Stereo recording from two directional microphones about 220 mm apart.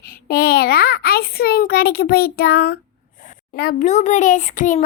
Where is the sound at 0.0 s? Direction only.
40° left (ahead or behind).